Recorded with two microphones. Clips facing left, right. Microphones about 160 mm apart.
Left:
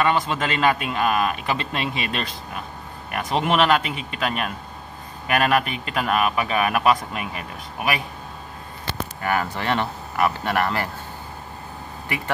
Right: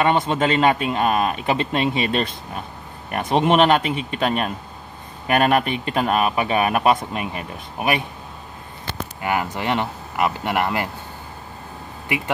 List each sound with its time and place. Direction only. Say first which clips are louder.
0.0 s a man's voice: right 3 dB; 25° right (ahead or behind)
9.2 s speech: right 1 dB; 15° right (ahead or behind)